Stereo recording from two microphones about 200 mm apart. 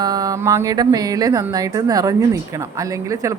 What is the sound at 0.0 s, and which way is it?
Speech, 20° right (ahead or behind).